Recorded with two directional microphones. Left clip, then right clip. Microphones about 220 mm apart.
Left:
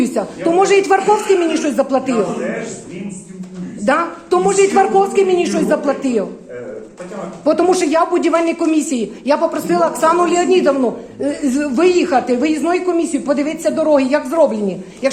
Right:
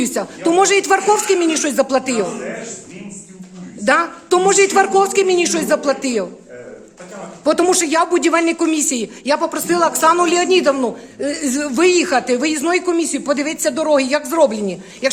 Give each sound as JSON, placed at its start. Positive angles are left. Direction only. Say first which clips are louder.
{"t": 0.0, "sound": "speech", "louder": "left 2 dB", "side_deg": -40}
{"t": 3.8, "sound": "speech", "louder": "right 1 dB", "side_deg": -45}
{"t": 7.4, "sound": "a woman's voice", "louder": "left 1 dB", "side_deg": -40}